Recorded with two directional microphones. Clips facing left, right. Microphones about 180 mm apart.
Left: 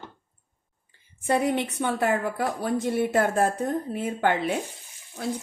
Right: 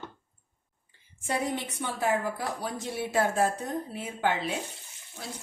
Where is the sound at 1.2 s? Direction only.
60° left (ahead or behind).